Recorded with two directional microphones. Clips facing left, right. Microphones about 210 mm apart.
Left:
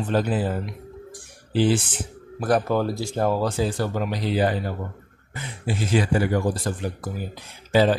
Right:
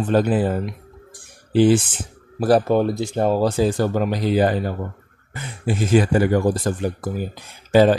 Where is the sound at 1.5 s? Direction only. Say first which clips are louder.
Right 6 dB; 55° right (ahead or behind).